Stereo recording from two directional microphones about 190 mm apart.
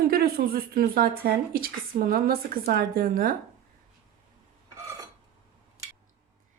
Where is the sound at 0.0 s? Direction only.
55° right (ahead or behind).